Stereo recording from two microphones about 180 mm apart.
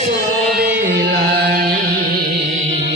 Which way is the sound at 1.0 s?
60° right (ahead or behind).